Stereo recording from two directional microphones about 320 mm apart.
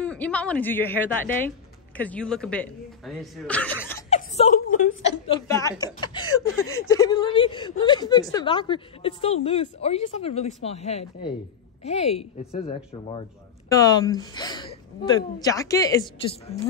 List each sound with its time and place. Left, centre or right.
0.0 s speech: centre
4.1 s a woman's voice: left
6.3 s speech: left
6.9 s a woman's voice: centre